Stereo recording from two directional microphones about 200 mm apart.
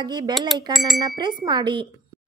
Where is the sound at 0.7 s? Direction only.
Centre (ahead or behind).